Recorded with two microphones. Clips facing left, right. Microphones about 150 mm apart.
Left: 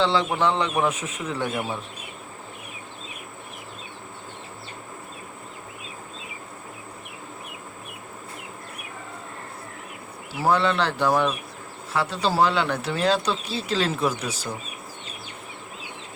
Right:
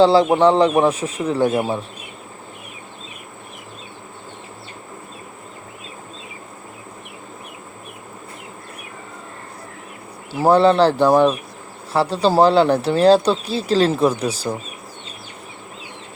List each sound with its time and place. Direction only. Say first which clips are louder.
0.0 s speech: right 9 dB; 35° right (ahead or behind)
10.4 s speech: right 9 dB; 35° right (ahead or behind)